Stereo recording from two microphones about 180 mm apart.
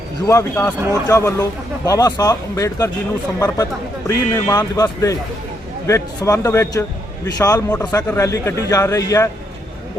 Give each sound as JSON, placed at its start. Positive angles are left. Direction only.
{"t": 0.3, "sound": "a man's voice", "side_deg": 15}